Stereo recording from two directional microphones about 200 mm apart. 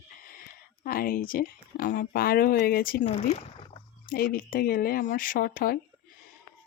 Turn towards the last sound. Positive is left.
turn(degrees=45)  # may be behind; listen again after turning